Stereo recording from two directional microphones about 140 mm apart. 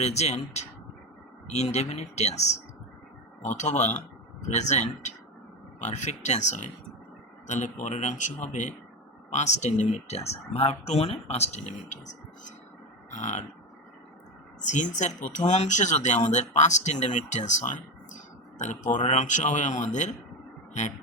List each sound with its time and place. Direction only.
0.0 s speech: 50° left (ahead or behind)
13.1 s burping: 60° left (ahead or behind)
14.6 s speech: 60° left (ahead or behind)